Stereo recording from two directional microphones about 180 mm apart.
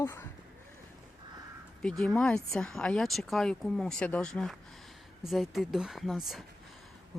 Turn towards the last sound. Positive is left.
turn(degrees=0)  # may be behind; listen again after turning